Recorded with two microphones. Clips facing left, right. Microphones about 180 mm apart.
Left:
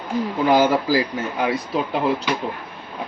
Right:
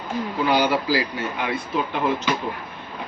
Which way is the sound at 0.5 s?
45° left (ahead or behind).